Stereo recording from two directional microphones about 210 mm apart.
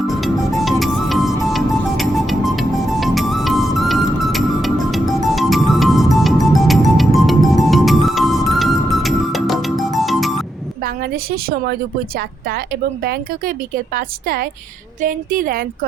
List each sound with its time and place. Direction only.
0.1 s music: centre (ahead or behind)
10.8 s a woman's voice: 45° right (ahead or behind)